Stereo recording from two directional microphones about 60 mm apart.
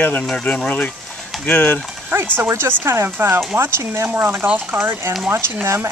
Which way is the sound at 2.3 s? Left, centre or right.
Right.